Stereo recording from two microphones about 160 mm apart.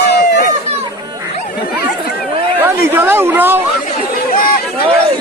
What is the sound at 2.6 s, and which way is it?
Speech, 15° right (ahead or behind).